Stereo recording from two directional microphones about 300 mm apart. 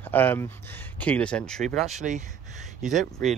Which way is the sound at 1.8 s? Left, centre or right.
Right.